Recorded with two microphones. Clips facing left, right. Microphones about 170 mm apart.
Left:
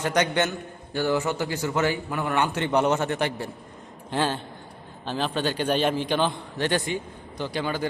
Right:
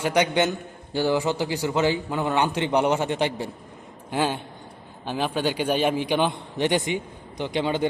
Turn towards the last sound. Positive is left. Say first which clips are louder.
# right 4 dB
turn(degrees=-20)  # may be behind; listen again after turning